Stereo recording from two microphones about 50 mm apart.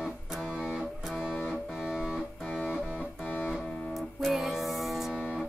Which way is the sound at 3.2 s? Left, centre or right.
Left.